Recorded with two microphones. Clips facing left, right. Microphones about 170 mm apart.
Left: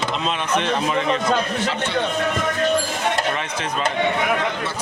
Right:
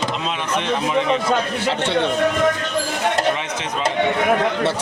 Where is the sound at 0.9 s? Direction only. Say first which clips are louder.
Right 2 dB; 15° right (ahead or behind).